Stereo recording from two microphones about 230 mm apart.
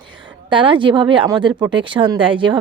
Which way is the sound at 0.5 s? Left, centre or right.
Right.